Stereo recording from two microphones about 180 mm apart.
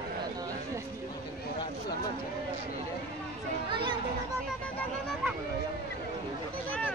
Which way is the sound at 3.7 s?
25° right (ahead or behind).